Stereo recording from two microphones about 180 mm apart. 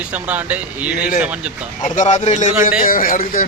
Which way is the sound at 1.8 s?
40° left (ahead or behind).